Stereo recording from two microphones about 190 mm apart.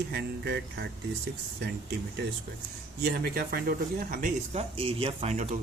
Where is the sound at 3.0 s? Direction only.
55° right (ahead or behind).